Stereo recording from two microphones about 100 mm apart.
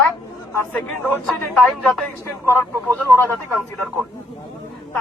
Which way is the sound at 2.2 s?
20° left (ahead or behind).